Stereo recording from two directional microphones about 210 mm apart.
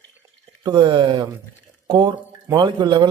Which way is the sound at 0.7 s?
20° right (ahead or behind).